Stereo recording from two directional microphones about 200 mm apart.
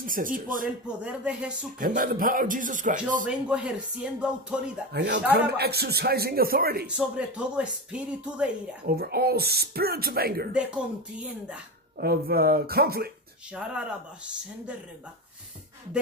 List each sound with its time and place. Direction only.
0.0 s speech: 45° right (ahead or behind)
0.8 s speech: 5° right (ahead or behind)
1.8 s speech: 45° right (ahead or behind)
3.3 s speech: 5° right (ahead or behind)
4.9 s speech: 60° right (ahead or behind)
6.9 s speech: 5° right (ahead or behind)
8.8 s speech: 50° right (ahead or behind)
11.1 s speech: 5° right (ahead or behind)
12.0 s speech: 50° right (ahead or behind)
13.5 s speech: 5° right (ahead or behind)